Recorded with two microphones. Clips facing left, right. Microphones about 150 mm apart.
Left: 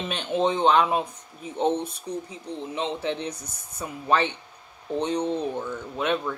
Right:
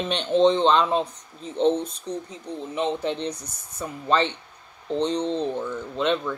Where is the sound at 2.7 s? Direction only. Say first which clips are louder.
Right 3 dB; 60° right (ahead or behind).